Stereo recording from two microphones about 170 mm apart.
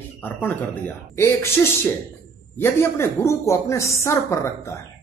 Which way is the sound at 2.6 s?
15° left (ahead or behind).